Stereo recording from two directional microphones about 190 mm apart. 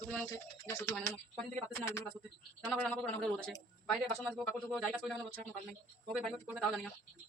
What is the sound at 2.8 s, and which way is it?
Speech, 5° left (ahead or behind).